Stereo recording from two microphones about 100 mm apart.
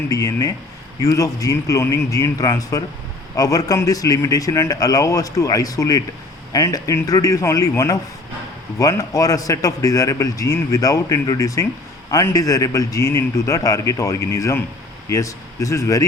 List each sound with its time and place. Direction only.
0.1 s a man's voice: 35° left (ahead or behind)
8.8 s a man's voice: 35° left (ahead or behind)